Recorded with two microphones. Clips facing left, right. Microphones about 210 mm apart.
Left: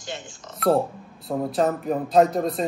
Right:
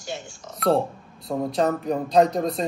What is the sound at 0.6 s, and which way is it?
Speech, centre (ahead or behind).